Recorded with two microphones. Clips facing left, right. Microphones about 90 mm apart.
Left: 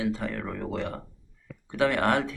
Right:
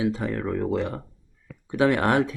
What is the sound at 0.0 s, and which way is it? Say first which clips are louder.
Speech: right 4 dB; 15° right (ahead or behind).